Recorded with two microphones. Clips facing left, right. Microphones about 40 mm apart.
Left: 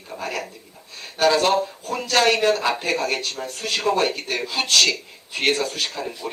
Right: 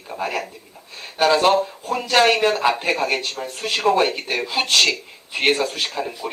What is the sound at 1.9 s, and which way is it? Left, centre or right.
A man's voice, centre.